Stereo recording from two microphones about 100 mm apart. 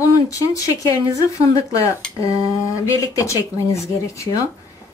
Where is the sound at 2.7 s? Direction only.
30° left (ahead or behind).